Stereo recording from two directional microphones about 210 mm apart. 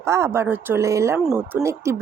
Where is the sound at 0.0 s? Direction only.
15° right (ahead or behind).